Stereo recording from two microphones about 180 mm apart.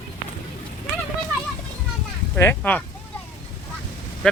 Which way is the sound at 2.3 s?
10° left (ahead or behind).